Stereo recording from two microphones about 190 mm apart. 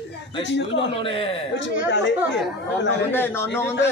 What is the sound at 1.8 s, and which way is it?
Speech, 70° left (ahead or behind).